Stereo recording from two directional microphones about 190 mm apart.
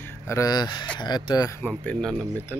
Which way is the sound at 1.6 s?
5° left (ahead or behind).